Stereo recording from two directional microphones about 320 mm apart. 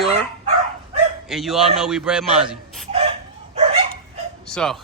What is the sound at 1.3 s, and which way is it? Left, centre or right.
A man's voice, centre.